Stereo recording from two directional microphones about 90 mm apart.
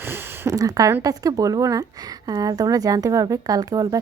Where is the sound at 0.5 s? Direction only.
40° right (ahead or behind).